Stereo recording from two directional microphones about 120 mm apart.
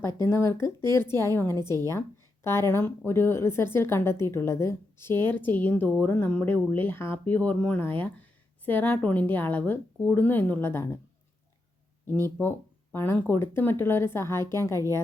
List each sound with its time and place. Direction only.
0.2 s speech: 20° left (ahead or behind)
12.4 s speech: 20° left (ahead or behind)